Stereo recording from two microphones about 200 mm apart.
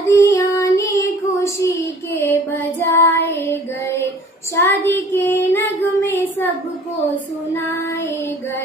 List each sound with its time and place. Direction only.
0.0 s child singing: 15° left (ahead or behind)
4.6 s child singing: 10° left (ahead or behind)